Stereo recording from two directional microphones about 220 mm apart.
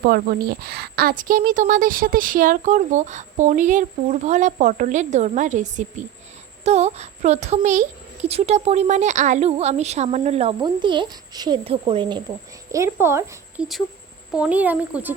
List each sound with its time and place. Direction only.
0.0 s a woman's voice: 40° right (ahead or behind); by 15.1 s 10° right (ahead or behind)